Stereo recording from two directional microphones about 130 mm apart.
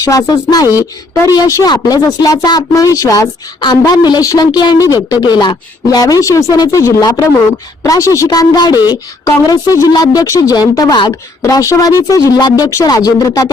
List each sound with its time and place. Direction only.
0.0 s a woman's voice: 25° left (ahead or behind)